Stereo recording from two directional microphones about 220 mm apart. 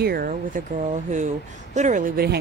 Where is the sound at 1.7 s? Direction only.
35° right (ahead or behind).